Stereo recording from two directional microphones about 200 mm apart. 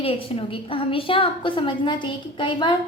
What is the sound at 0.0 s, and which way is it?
A woman's voice, 30° left (ahead or behind).